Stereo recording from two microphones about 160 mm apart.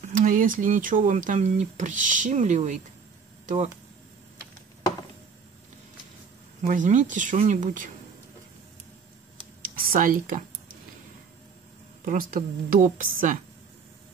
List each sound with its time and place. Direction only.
0.0 s speech: 55° right (ahead or behind)
6.6 s speech: 55° right (ahead or behind)
9.6 s a sound: 60° right (ahead or behind)
12.0 s a woman's voice: 60° right (ahead or behind)